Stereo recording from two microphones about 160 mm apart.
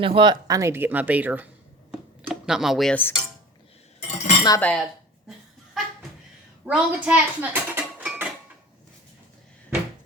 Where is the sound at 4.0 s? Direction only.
45° left (ahead or behind).